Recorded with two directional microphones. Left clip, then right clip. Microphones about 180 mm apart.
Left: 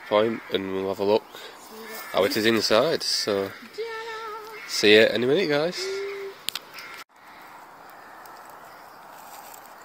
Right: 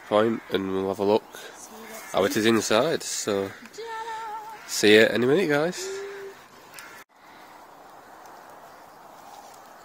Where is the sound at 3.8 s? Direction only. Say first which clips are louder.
Left 4 dB; 25° right (ahead or behind).